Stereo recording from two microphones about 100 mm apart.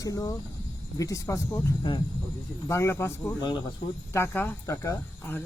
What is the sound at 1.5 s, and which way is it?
Speech, 20° left (ahead or behind).